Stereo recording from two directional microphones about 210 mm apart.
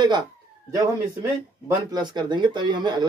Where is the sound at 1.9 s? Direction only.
20° right (ahead or behind).